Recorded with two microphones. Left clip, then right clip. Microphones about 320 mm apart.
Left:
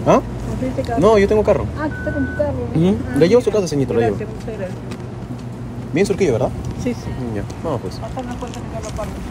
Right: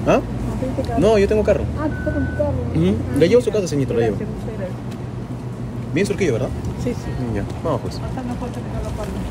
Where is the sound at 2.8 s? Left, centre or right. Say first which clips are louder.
Left 2 dB; centre.